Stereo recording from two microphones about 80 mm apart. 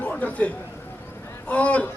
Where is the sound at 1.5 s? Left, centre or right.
Centre.